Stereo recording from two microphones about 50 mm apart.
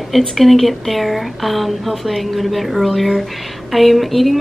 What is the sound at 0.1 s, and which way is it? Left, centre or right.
A woman's voice, centre.